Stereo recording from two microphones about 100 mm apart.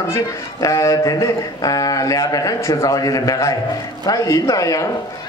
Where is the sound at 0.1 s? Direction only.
35° left (ahead or behind).